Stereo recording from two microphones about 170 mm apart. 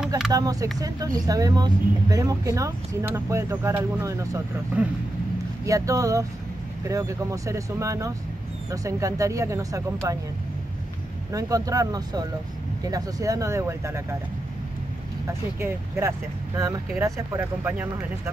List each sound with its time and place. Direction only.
0.3 s speech: 20° right (ahead or behind)
5.7 s speech: 20° right (ahead or behind)
11.3 s speech: 20° right (ahead or behind)
15.2 s speech: 15° right (ahead or behind)